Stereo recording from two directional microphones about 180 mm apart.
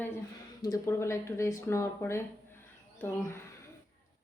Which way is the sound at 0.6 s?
15° left (ahead or behind).